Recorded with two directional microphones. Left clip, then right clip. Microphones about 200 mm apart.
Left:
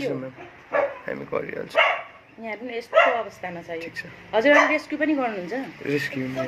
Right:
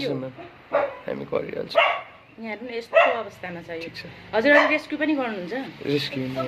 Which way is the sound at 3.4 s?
10° right (ahead or behind).